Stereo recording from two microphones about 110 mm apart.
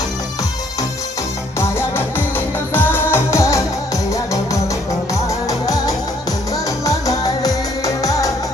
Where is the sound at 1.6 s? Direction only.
20° left (ahead or behind).